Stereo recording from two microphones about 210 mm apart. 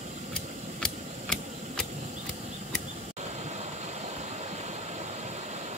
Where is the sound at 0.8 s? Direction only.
5° left (ahead or behind).